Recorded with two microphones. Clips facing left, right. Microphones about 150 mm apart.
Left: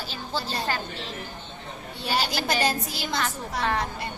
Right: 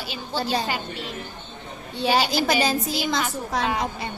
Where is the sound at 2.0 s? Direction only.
90° right.